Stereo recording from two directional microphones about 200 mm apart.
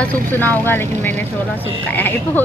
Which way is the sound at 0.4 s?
10° left (ahead or behind).